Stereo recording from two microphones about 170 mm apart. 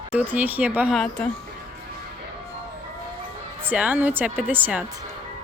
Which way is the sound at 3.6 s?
10° right (ahead or behind).